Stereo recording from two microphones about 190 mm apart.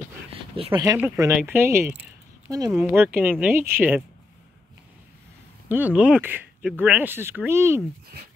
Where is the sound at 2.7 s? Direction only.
10° right (ahead or behind).